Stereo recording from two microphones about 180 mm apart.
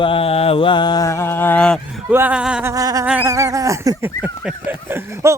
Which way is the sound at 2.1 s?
10° right (ahead or behind).